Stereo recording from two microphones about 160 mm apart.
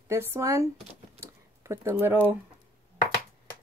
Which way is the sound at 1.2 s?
20° right (ahead or behind).